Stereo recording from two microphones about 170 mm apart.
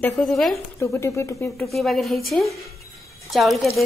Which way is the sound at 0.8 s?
15° left (ahead or behind).